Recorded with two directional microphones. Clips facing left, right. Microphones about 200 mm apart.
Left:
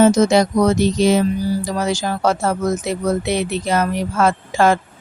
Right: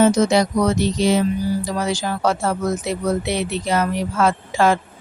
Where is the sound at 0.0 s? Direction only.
45° left (ahead or behind).